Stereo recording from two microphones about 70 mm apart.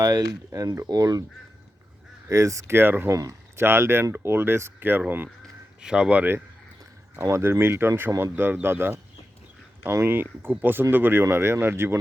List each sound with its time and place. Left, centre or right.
0.0 s speech: right
2.3 s speech: right
3.2 s a sound: right
3.6 s speech: right
5.8 s speech: centre
7.2 s speech: right